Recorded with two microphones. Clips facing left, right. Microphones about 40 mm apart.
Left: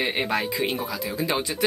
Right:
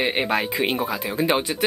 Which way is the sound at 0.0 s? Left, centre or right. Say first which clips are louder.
Right 3 dB; right.